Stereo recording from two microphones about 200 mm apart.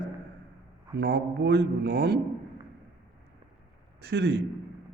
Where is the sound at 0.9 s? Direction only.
60° right (ahead or behind).